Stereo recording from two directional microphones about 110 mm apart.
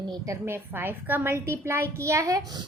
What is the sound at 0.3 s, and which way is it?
A woman's voice, 20° right (ahead or behind).